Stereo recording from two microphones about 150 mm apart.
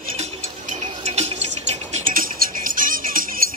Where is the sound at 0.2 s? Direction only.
45° right (ahead or behind).